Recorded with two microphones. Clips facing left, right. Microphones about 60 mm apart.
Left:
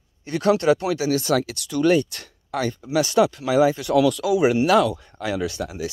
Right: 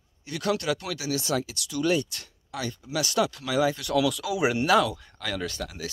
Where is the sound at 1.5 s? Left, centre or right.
Left.